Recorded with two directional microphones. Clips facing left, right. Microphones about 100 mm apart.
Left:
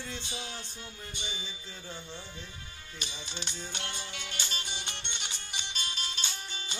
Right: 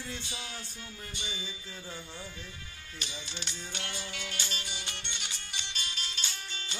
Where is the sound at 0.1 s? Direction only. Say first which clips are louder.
Left 1 dB; 25° left (ahead or behind).